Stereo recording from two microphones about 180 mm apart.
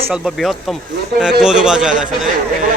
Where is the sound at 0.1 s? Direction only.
Centre (ahead or behind).